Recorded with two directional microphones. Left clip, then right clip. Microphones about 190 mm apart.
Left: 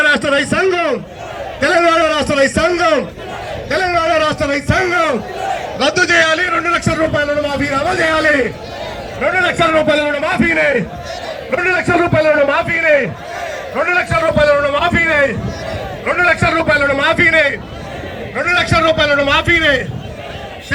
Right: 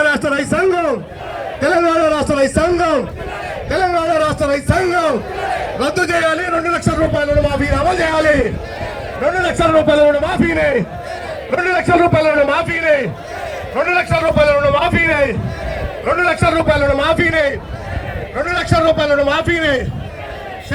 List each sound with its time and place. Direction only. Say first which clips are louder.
0.0 s a man's voice: left 2 dB; 65° right (ahead or behind)
1.6 s a sound: left 2 dB; 45° right (ahead or behind)
5.9 s a sound: left 4 dB; 65° right (ahead or behind); by 7.0 s 30° right (ahead or behind)
7.0 s a man's voice: even; 15° right (ahead or behind)
11.5 s a man's voice: even; 5° right (ahead or behind); by 13.1 s 20° left (ahead or behind)
13.7 s a man's voice: left 1 dB; centre (ahead or behind); by 19.8 s 30° right (ahead or behind)